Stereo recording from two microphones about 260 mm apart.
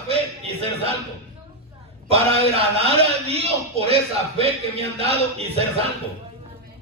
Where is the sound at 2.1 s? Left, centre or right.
Right.